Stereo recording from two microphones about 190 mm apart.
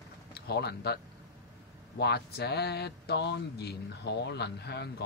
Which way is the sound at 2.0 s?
55° left (ahead or behind).